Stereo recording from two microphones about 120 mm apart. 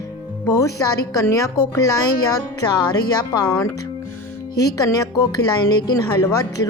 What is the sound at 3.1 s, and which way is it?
A woman's voice, 35° left (ahead or behind).